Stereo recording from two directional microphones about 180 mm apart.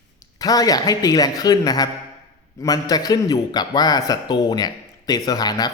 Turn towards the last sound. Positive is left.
turn(degrees=20)  # may be behind; listen again after turning